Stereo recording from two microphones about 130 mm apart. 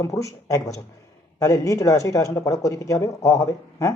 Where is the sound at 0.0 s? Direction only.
25° left (ahead or behind).